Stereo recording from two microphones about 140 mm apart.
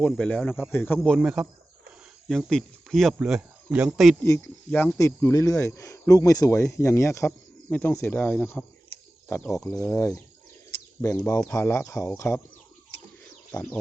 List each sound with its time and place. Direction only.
0.0 s speech: 10° left (ahead or behind)
4.2 s speech: 15° left (ahead or behind)
9.6 s speech: 25° left (ahead or behind)
13.5 s speech: 10° left (ahead or behind)